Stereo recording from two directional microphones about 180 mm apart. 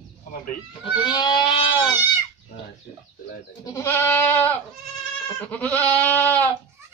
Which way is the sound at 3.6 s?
15° left (ahead or behind).